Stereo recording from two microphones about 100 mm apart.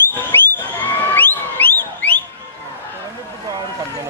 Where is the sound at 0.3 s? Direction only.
20° left (ahead or behind).